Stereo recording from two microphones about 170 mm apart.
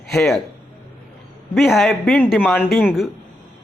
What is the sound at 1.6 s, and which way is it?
A man's voice, centre (ahead or behind).